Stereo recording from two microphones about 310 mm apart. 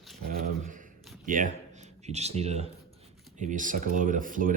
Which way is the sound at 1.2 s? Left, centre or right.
Right.